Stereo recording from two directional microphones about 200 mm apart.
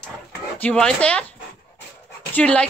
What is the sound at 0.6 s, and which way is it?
Speech, 5° left (ahead or behind).